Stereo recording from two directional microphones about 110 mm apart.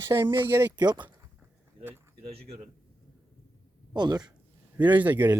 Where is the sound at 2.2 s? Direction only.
65° right (ahead or behind).